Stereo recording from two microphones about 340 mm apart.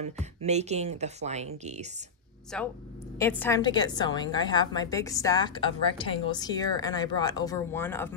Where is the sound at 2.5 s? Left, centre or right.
Centre.